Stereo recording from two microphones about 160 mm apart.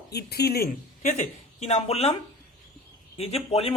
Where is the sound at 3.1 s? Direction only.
40° left (ahead or behind).